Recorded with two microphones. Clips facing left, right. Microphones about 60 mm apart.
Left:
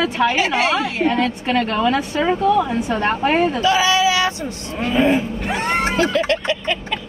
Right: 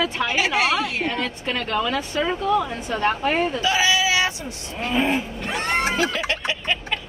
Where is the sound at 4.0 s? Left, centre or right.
Right.